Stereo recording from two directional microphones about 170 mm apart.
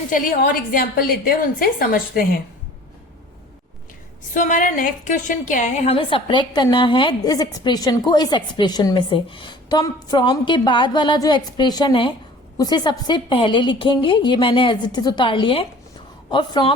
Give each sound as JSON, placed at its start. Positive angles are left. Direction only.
{"t": 0.1, "sound": "a woman's voice", "side_deg": 55}
{"t": 4.4, "sound": "a woman's voice", "side_deg": 50}